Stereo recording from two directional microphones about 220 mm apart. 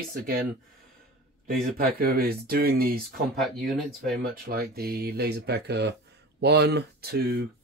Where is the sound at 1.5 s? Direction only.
40° right (ahead or behind).